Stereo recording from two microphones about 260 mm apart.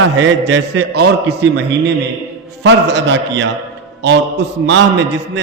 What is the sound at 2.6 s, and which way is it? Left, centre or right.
A man's voice, right.